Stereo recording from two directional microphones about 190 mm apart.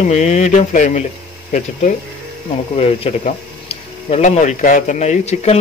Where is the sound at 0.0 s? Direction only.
40° left (ahead or behind).